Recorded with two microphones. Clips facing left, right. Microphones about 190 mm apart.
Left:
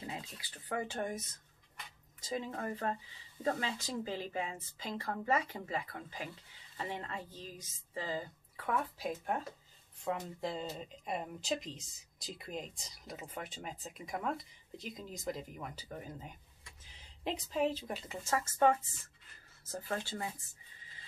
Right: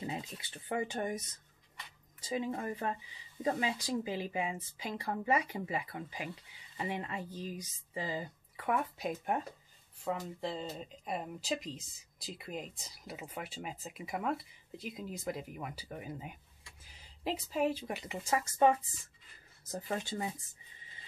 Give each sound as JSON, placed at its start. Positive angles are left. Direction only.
{"t": 0.0, "sound": "speech", "side_deg": -20}
{"t": 2.2, "sound": "speech", "side_deg": -10}
{"t": 10.0, "sound": "speech", "side_deg": 0}